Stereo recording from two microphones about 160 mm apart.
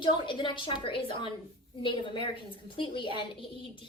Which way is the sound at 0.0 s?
30° left (ahead or behind).